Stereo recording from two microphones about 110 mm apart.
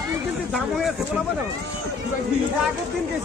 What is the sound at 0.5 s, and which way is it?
Speech, centre (ahead or behind).